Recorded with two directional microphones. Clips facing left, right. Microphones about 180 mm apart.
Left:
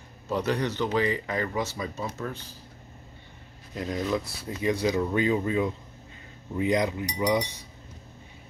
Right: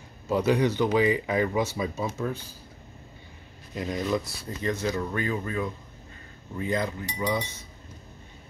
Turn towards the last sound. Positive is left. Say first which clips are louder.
# left 3 dB
turn(degrees=15)  # may be behind; listen again after turning